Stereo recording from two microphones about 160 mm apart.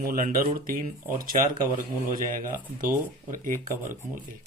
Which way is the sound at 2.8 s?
60° right (ahead or behind).